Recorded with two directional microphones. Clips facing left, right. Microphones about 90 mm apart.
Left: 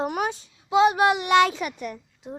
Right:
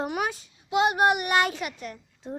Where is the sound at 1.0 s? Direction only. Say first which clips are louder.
Left 3 dB; 90° left.